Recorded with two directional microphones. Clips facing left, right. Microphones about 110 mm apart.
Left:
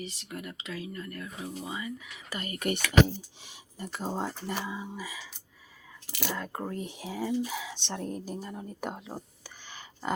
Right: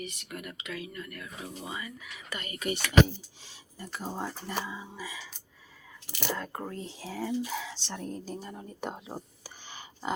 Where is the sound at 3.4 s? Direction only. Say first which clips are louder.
Left 4 dB; 20° left (ahead or behind).